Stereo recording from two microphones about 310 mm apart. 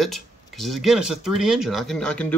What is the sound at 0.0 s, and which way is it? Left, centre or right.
Speech, centre.